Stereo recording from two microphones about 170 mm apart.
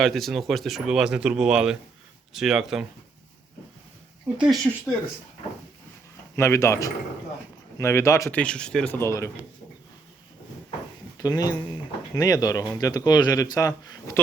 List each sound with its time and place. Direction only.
0.0 s speech: centre (ahead or behind)
4.4 s speech: centre (ahead or behind)
6.3 s speech: 15° left (ahead or behind)
8.4 s speech: 5° left (ahead or behind)
11.2 s a man's voice: 20° left (ahead or behind)